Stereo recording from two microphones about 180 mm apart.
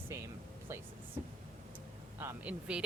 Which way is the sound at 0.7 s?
15° right (ahead or behind).